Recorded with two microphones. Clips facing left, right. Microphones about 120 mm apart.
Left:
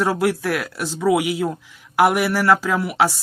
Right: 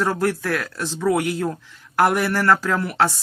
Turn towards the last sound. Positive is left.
turn(degrees=10)  # may be behind; listen again after turning